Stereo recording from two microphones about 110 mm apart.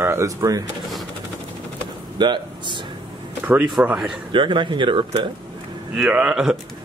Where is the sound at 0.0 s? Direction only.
25° right (ahead or behind).